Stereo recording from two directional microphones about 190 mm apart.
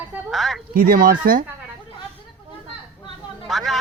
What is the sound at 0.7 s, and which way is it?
Speech, 50° right (ahead or behind).